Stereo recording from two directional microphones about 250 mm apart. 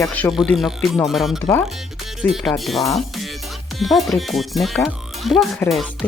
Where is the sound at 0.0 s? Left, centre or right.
Centre.